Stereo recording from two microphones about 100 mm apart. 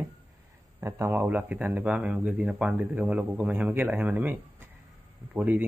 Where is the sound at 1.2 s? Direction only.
15° right (ahead or behind).